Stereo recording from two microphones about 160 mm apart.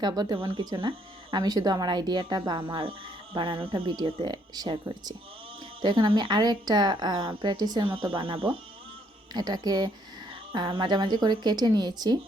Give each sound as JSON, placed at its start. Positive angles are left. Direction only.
{"t": 0.0, "sound": "a woman's voice", "side_deg": -25}